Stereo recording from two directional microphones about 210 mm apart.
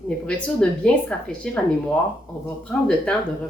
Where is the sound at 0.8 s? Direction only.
5° left (ahead or behind).